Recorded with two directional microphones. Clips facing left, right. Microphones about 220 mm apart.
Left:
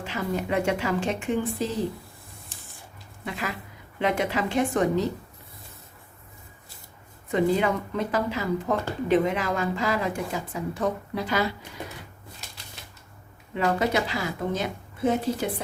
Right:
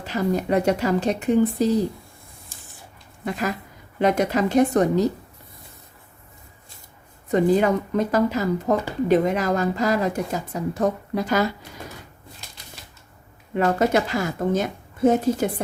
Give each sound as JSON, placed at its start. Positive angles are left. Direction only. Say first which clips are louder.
{"t": 0.0, "sound": "speech", "louder": "right 6 dB", "side_deg": -40}
{"t": 3.2, "sound": "a woman's voice", "louder": "right 6 dB", "side_deg": -45}
{"t": 7.3, "sound": "speech", "louder": "right 5 dB", "side_deg": -40}
{"t": 12.8, "sound": "typewriter", "louder": "even", "side_deg": 0}
{"t": 13.5, "sound": "a woman's voice", "louder": "right 5 dB", "side_deg": -50}